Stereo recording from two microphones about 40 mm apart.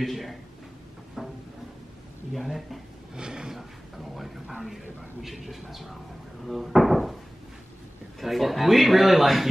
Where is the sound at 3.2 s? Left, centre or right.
Centre.